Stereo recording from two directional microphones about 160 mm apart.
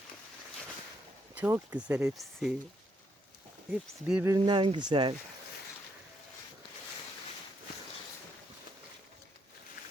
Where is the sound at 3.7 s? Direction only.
5° right (ahead or behind).